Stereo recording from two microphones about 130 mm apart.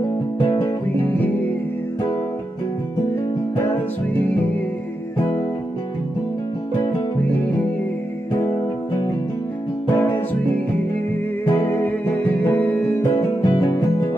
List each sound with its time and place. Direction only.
0.0 s music: 35° left (ahead or behind)
1.0 s music: 15° left (ahead or behind)
7.2 s music: 10° left (ahead or behind)
9.9 s music: 15° left (ahead or behind)
11.5 s music: 20° left (ahead or behind)
13.4 s music: 40° left (ahead or behind)